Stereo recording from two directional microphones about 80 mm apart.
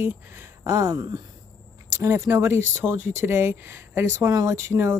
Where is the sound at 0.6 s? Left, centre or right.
Right.